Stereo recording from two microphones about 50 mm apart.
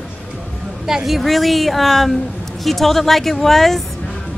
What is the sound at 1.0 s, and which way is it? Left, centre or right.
Speech, centre.